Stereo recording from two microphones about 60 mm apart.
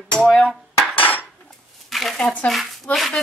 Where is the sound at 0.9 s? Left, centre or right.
Left.